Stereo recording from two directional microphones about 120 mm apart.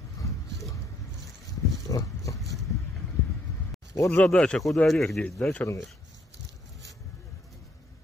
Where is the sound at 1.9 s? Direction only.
25° left (ahead or behind).